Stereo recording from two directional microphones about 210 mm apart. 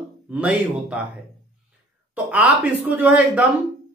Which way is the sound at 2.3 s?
5° right (ahead or behind).